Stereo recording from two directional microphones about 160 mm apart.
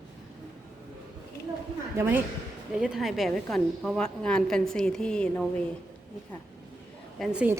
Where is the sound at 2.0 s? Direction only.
10° right (ahead or behind); by 5.5 s 5° left (ahead or behind).